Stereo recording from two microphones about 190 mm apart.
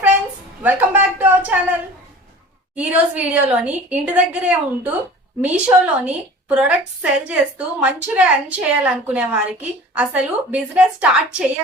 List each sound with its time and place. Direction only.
0.6 s a woman's voice: 10° right (ahead or behind)